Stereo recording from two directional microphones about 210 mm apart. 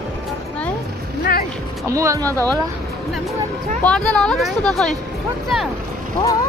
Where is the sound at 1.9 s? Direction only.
15° right (ahead or behind).